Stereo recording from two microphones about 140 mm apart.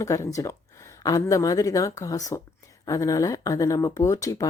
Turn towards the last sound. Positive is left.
turn(degrees=25)  # may be behind; listen again after turning